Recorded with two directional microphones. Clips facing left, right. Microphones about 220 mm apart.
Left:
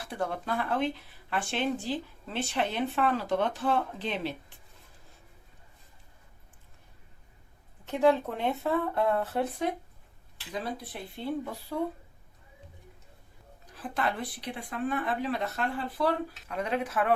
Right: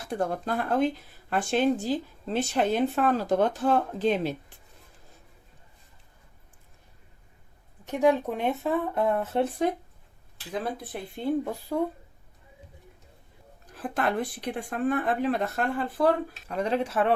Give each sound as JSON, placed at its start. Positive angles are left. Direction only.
{"t": 0.0, "sound": "speech", "side_deg": -45}
{"t": 7.9, "sound": "speech", "side_deg": -15}
{"t": 11.7, "sound": "speech", "side_deg": -45}
{"t": 13.7, "sound": "speech", "side_deg": -50}
{"t": 16.6, "sound": "speech", "side_deg": -30}